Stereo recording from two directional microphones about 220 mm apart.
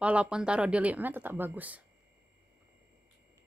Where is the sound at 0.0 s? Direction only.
5° right (ahead or behind).